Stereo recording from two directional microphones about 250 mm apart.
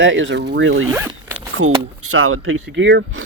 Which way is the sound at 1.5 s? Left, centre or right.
Right.